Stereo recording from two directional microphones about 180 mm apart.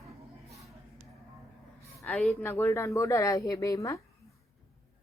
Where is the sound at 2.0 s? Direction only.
Centre (ahead or behind); by 4.0 s 15° left (ahead or behind).